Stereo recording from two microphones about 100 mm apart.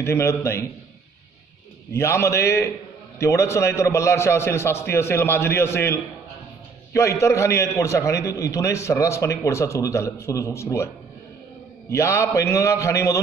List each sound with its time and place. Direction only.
0.0 s a man's voice: 30° left (ahead or behind)
2.0 s a man's voice: 25° left (ahead or behind)
11.9 s a man's voice: 30° left (ahead or behind)